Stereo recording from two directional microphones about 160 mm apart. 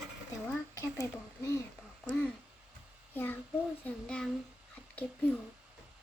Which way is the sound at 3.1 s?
10° left (ahead or behind).